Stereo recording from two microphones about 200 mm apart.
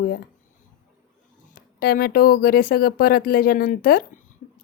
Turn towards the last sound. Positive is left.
turn(degrees=45)  # may be behind; listen again after turning